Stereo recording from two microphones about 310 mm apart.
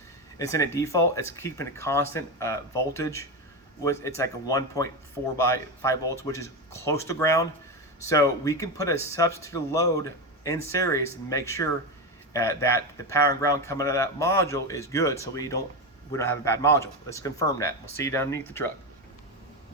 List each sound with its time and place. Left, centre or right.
0.3 s speech: centre